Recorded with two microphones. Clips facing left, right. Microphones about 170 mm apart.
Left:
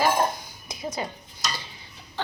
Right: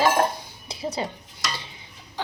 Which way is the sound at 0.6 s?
30° right (ahead or behind).